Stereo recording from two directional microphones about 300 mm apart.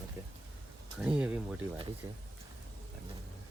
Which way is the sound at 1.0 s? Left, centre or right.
Centre.